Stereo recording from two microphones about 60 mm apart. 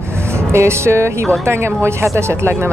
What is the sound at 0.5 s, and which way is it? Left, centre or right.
Speech, right.